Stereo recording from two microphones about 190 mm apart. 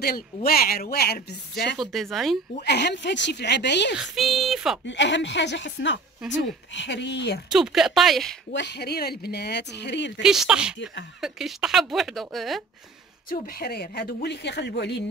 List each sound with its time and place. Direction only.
0.0 s speech: 50° left (ahead or behind)
1.8 s speech: centre (ahead or behind)
2.6 s speech: 60° left (ahead or behind)
3.9 s speech: centre (ahead or behind)
4.8 s a woman's voice: 70° left (ahead or behind)
7.5 s speech: centre (ahead or behind)
8.5 s speech: 60° left (ahead or behind)
10.2 s speech: centre (ahead or behind)
13.3 s speech: 50° left (ahead or behind)